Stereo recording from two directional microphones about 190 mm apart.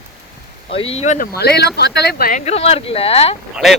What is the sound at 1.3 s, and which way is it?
Speech, 60° left (ahead or behind).